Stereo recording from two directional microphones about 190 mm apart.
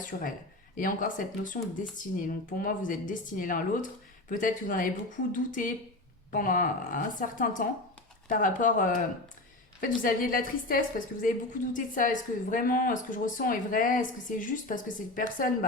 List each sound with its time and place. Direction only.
0.0 s a woman's voice: 45° left (ahead or behind)